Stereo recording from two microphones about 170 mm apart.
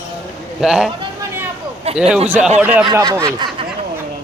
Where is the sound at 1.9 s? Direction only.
35° right (ahead or behind).